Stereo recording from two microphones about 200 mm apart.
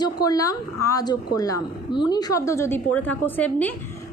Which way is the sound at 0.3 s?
15° left (ahead or behind).